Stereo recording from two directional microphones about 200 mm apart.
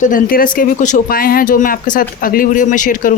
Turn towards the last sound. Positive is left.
turn(degrees=40)  # may be behind; listen again after turning